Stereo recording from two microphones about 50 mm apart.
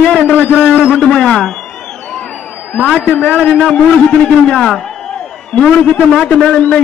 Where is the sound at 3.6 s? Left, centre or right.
Centre.